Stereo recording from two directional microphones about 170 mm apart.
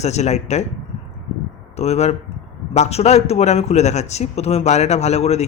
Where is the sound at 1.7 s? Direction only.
40° left (ahead or behind).